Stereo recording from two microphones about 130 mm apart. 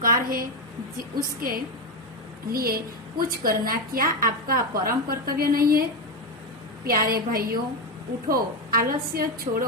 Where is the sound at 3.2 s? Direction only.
90° right.